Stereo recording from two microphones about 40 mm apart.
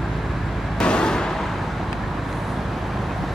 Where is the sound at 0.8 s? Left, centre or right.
Left.